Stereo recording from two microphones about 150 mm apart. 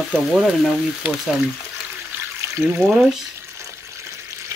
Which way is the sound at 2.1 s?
15° right (ahead or behind).